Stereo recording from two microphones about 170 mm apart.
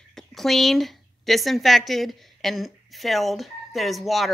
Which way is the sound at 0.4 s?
Centre (ahead or behind).